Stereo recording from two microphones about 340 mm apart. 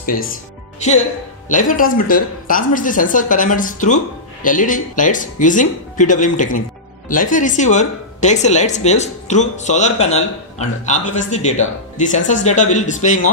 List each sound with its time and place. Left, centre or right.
0.0 s speech: left